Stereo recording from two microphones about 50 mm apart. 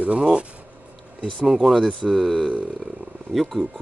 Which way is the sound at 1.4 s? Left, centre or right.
Centre.